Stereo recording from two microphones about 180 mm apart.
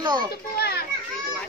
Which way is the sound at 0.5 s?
60° left (ahead or behind).